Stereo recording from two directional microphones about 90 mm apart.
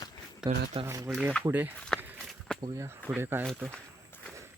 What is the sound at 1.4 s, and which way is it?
Speech, 25° right (ahead or behind).